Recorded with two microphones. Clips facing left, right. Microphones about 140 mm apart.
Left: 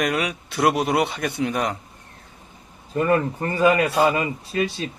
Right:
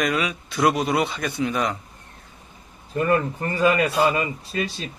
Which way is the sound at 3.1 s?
30° left (ahead or behind).